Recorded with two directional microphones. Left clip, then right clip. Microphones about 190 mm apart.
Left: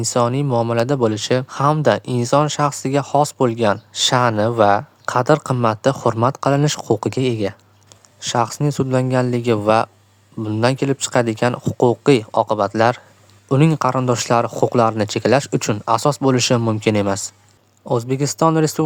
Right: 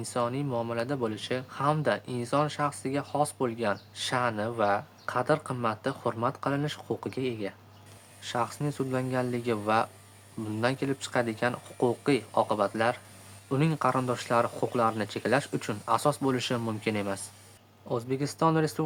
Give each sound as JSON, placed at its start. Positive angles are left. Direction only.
{"t": 0.0, "sound": "speech", "side_deg": 45}